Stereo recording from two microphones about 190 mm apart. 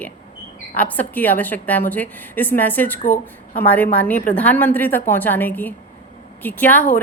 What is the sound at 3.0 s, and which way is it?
Speech, 45° left (ahead or behind).